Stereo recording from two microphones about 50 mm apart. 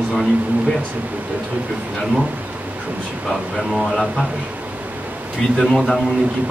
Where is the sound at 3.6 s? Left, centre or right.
Centre.